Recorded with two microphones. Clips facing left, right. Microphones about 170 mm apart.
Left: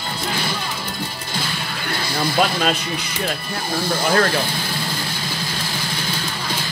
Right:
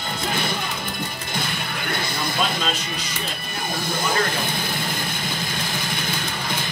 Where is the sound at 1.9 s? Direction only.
20° right (ahead or behind).